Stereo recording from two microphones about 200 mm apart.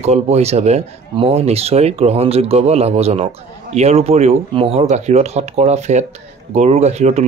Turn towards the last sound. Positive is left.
turn(degrees=-35)  # may be behind; listen again after turning